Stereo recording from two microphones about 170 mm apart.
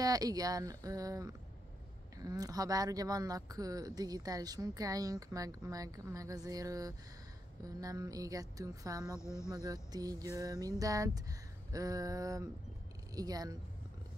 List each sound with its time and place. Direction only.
0.0 s speech: 20° right (ahead or behind)
9.2 s speech: 15° left (ahead or behind)
9.5 s speech: 20° right (ahead or behind)